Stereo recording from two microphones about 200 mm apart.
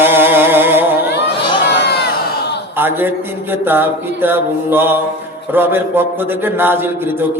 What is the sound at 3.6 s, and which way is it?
A man's voice, 10° right (ahead or behind).